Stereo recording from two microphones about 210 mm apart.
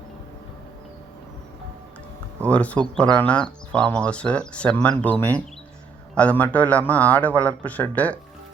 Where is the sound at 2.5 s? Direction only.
5° left (ahead or behind).